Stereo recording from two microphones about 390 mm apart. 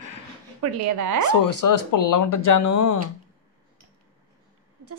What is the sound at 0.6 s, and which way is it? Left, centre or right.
Speech, right.